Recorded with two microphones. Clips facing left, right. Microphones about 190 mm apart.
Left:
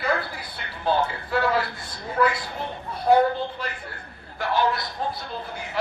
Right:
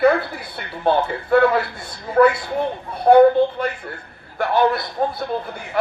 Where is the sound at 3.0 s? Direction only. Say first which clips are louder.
Right 8 dB; 55° right (ahead or behind).